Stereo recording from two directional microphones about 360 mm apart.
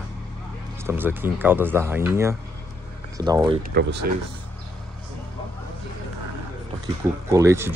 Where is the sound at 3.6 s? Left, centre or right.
Right.